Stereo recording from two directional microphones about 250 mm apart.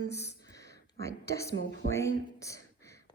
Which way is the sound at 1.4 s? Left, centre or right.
Left.